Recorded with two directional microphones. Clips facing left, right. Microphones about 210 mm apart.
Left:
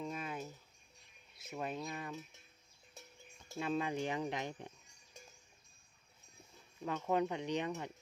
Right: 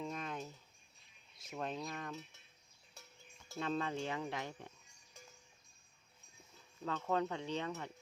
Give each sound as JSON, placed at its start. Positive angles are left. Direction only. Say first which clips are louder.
{"t": 0.0, "sound": "cricket", "louder": "left 1 dB", "side_deg": 5}
{"t": 1.4, "sound": "wind chime", "louder": "left 1 dB", "side_deg": 5}
{"t": 3.6, "sound": "speech", "louder": "left 2 dB", "side_deg": 10}
{"t": 6.8, "sound": "speech", "louder": "left 2 dB", "side_deg": 15}